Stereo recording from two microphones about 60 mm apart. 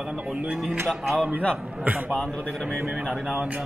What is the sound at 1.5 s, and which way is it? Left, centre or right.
Speech, centre.